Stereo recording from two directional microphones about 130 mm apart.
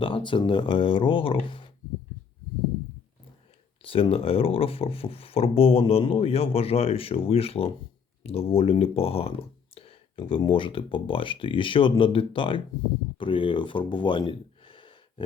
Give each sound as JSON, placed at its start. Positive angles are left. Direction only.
{"t": 0.0, "sound": "speech", "side_deg": 40}
{"t": 3.8, "sound": "speech", "side_deg": 45}